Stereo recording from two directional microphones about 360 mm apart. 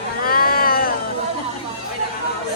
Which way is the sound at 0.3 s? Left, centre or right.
Left.